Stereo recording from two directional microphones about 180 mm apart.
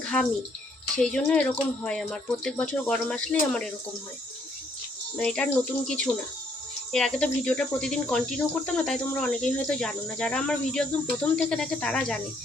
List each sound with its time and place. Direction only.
0.0 s bathtub: 5° left (ahead or behind)
0.9 s speech: 5° left (ahead or behind)
5.1 s speech: 5° left (ahead or behind)
6.9 s speech: 5° left (ahead or behind)